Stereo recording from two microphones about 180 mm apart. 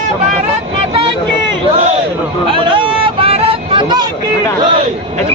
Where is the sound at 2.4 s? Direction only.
30° right (ahead or behind).